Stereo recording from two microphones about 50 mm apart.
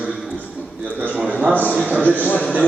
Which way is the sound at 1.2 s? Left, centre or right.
Right.